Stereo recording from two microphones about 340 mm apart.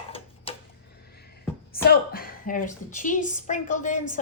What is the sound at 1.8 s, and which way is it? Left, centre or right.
A woman's voice, left.